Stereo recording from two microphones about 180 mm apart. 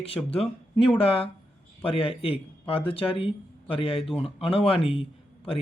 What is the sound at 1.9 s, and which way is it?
Speech, 30° left (ahead or behind).